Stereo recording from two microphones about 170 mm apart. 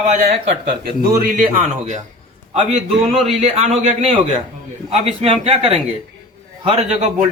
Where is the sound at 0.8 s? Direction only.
60° right (ahead or behind).